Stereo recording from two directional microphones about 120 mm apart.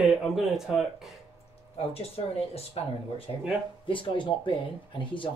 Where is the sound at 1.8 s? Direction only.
55° left (ahead or behind).